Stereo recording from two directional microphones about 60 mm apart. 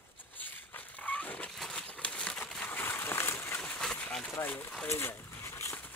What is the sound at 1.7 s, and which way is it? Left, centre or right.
Crumpling, centre.